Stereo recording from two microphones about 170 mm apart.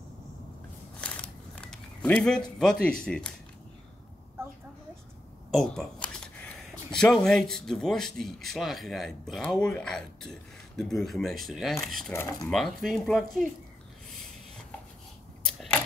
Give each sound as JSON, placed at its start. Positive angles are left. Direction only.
{"t": 1.0, "sound": "a sound", "side_deg": 5}
{"t": 5.5, "sound": "speech", "side_deg": 0}
{"t": 12.1, "sound": "speech", "side_deg": 15}
{"t": 12.4, "sound": "speech", "side_deg": 0}
{"t": 15.4, "sound": "camera", "side_deg": 0}